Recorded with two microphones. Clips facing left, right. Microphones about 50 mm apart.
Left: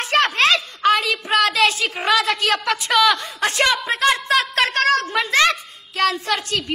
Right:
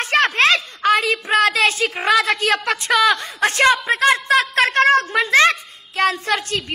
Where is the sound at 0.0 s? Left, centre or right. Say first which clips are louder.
Right 1 dB; right.